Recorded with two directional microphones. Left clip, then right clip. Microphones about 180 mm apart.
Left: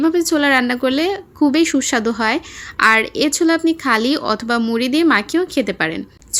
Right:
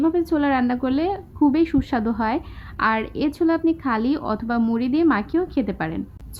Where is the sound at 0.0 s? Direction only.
15° left (ahead or behind).